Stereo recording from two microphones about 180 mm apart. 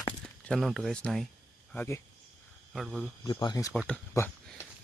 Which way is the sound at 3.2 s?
20° left (ahead or behind).